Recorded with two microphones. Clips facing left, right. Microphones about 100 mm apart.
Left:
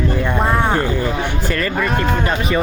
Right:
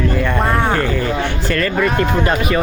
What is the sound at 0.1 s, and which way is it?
Speech, 20° left (ahead or behind).